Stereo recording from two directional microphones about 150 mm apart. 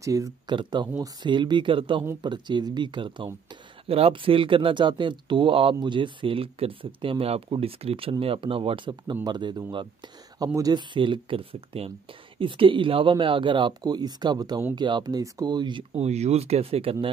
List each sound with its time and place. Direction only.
0.0 s speech: 20° right (ahead or behind)
15.9 s speech: 45° right (ahead or behind)